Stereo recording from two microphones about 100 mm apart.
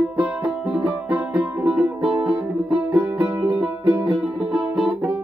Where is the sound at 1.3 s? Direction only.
35° right (ahead or behind).